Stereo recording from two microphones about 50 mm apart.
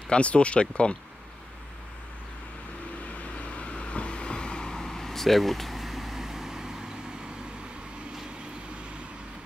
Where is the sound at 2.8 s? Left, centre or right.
Left; by 9.0 s right.